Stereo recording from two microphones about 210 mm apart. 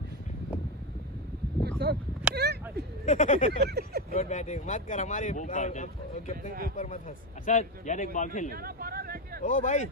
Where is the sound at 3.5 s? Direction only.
50° right (ahead or behind).